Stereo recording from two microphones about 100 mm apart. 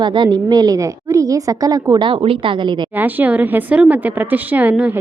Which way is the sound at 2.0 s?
65° right (ahead or behind).